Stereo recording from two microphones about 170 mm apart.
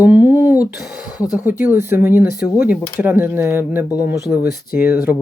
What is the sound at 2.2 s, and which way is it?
Speech, 60° left (ahead or behind).